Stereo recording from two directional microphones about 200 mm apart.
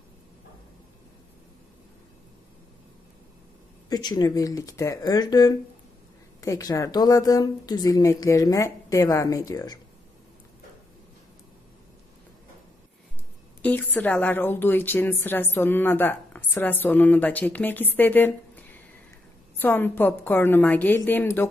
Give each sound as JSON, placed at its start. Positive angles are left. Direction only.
{"t": 3.9, "sound": "a woman's voice", "side_deg": 20}
{"t": 13.6, "sound": "a woman's voice", "side_deg": 5}
{"t": 19.5, "sound": "a woman's voice", "side_deg": 10}